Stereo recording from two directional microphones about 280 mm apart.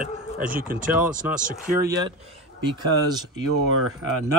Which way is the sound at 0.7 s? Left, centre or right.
Right.